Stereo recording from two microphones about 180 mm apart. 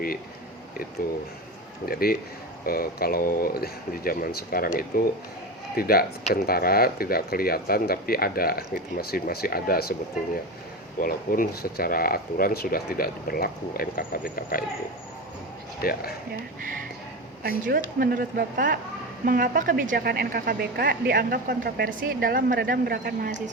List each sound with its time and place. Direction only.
1.9 s speech: 55° left (ahead or behind)
11.0 s speech: 55° left (ahead or behind)
15.8 s speech: 55° left (ahead or behind)
17.7 s a woman's voice: 55° right (ahead or behind)